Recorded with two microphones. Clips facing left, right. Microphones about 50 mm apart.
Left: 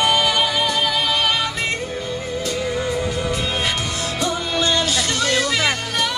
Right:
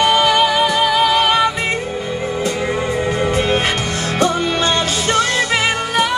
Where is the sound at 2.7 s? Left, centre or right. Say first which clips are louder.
Right 4 dB; right.